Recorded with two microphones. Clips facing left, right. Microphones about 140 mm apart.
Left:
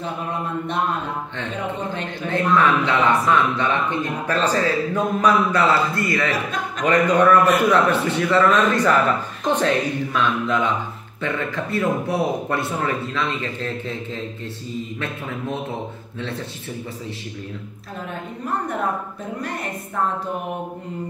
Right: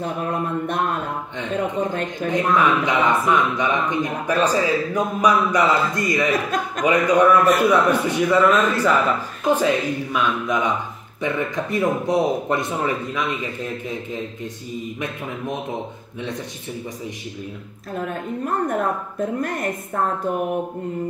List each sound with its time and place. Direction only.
2.2 s speech: 15° right (ahead or behind)